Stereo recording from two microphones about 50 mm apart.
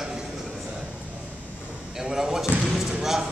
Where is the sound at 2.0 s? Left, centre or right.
Centre.